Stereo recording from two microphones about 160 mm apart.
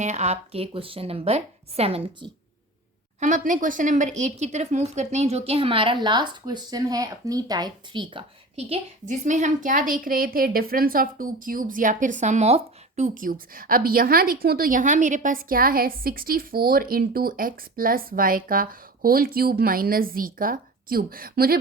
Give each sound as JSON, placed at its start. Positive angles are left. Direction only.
{"t": 0.0, "sound": "speech", "side_deg": -45}
{"t": 3.2, "sound": "speech", "side_deg": -50}
{"t": 9.0, "sound": "a woman's voice", "side_deg": -50}
{"t": 13.1, "sound": "a woman's voice", "side_deg": -60}